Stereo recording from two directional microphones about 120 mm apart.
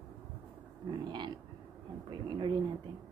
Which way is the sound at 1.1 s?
40° right (ahead or behind).